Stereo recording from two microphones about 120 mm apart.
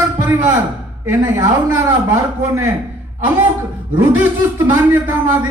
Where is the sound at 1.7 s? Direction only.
25° right (ahead or behind).